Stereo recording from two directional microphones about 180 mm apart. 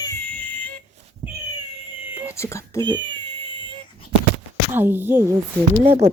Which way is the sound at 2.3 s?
15° left (ahead or behind).